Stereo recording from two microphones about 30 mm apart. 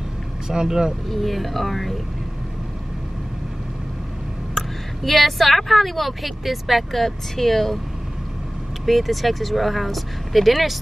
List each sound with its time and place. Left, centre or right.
0.5 s speech: right
1.0 s a woman's voice: centre
4.6 s a woman's voice: centre
8.8 s a woman's voice: centre